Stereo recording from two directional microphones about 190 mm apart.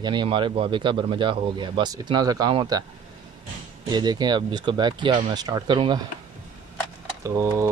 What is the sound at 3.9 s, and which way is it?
Speech, 20° right (ahead or behind).